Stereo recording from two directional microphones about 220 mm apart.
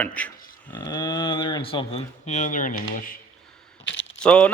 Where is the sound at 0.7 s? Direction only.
20° left (ahead or behind); by 3.2 s 35° left (ahead or behind).